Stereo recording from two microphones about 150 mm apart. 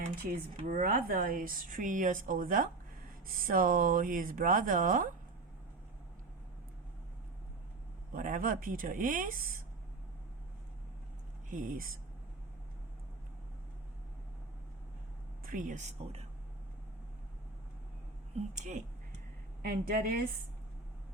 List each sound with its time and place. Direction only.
0.2 s speech: 70° right (ahead or behind)
8.1 s speech: 65° right (ahead or behind)
11.4 s speech: 65° right (ahead or behind)
15.4 s speech: 60° right (ahead or behind)
18.3 s speech: 55° right (ahead or behind)
19.6 s a woman's voice: 85° right